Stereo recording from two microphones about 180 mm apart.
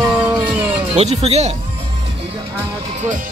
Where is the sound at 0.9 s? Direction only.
35° right (ahead or behind).